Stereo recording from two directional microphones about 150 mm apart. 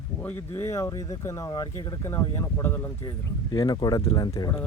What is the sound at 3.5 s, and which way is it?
Speech, 30° left (ahead or behind).